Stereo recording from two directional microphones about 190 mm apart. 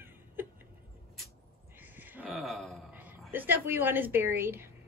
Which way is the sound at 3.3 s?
10° right (ahead or behind).